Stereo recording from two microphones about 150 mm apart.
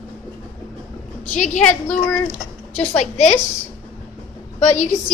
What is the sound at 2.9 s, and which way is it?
Speech, 45° left (ahead or behind).